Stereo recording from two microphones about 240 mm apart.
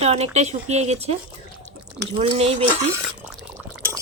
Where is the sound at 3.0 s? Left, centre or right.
Centre.